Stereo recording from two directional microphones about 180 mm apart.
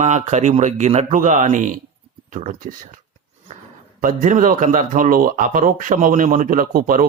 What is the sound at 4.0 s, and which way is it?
Speech, 45° right (ahead or behind).